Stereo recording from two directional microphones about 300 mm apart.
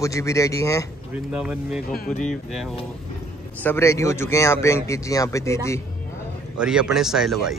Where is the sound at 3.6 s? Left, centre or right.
Centre.